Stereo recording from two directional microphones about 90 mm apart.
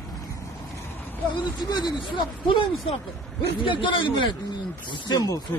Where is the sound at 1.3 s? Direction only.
55° left (ahead or behind).